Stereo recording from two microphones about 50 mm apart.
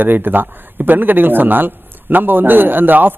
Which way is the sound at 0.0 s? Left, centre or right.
Right.